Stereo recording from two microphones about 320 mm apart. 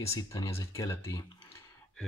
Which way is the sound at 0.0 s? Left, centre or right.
Centre.